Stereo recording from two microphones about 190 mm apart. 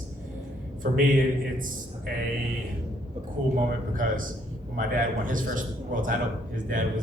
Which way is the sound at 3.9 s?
45° right (ahead or behind).